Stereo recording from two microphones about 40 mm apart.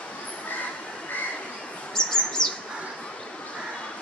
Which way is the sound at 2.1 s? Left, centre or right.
Centre.